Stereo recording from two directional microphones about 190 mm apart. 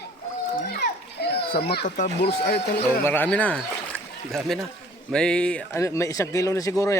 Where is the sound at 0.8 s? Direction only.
55° left (ahead or behind).